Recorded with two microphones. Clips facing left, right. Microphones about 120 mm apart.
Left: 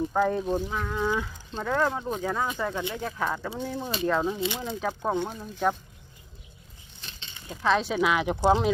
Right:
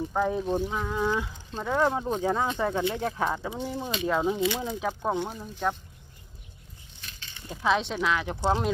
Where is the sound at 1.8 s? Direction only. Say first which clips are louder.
Right 5 dB; 20° right (ahead or behind).